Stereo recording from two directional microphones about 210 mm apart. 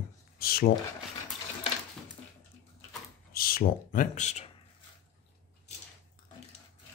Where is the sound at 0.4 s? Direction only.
45° left (ahead or behind).